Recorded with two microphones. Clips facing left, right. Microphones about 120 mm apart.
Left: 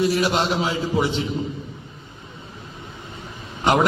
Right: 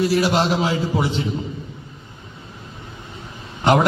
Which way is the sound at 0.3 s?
40° right (ahead or behind).